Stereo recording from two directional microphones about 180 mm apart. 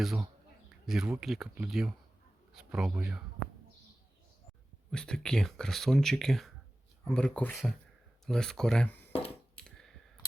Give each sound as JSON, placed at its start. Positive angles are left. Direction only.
{"t": 0.0, "sound": "speech", "side_deg": 0}
{"t": 4.9, "sound": "speech", "side_deg": 5}
{"t": 9.6, "sound": "clicking", "side_deg": 5}